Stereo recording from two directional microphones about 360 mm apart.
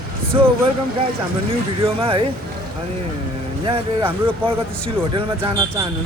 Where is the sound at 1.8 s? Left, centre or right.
Centre.